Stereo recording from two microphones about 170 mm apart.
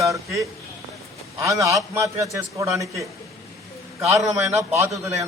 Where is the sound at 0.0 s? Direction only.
20° right (ahead or behind).